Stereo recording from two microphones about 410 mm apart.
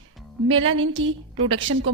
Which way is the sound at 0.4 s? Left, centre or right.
Right.